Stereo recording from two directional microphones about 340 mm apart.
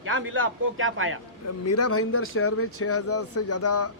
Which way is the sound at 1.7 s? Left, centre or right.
Left.